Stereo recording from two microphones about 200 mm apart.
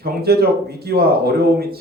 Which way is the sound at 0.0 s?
50° right (ahead or behind).